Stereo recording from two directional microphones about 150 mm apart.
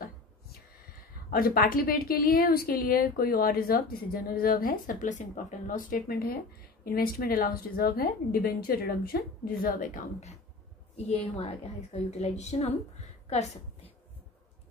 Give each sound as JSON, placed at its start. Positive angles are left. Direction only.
{"t": 1.3, "sound": "a woman's voice", "side_deg": 75}
{"t": 6.8, "sound": "a woman's voice", "side_deg": 90}
{"t": 11.1, "sound": "a woman's voice", "side_deg": 45}